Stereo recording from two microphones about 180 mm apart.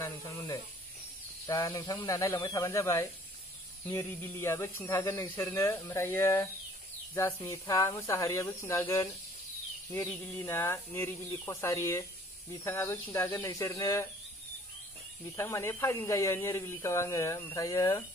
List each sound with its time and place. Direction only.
0.0 s speech: 20° left (ahead or behind)
15.3 s speech: 15° left (ahead or behind)